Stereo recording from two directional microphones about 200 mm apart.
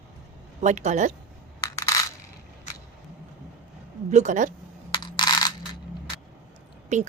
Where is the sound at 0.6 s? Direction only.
35° right (ahead or behind).